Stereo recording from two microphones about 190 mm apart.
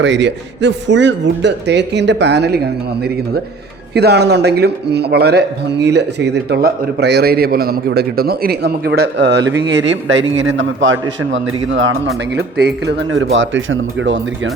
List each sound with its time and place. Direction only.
0.0 s speech: 70° right (ahead or behind)
3.9 s speech: 60° right (ahead or behind); by 14.5 s 85° right